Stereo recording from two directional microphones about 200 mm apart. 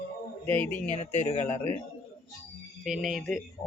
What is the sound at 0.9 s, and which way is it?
Speech, 35° left (ahead or behind).